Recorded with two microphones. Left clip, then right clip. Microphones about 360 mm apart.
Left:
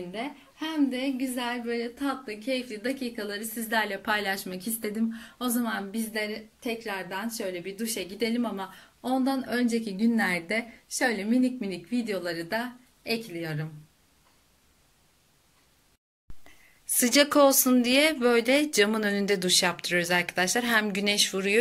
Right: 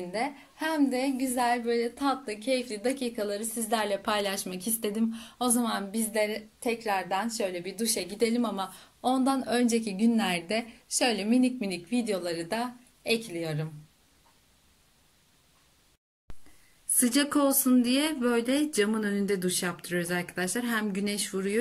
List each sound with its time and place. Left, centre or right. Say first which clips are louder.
0.1 s a woman's voice: right 4 dB; centre
16.9 s speech: left 5 dB; centre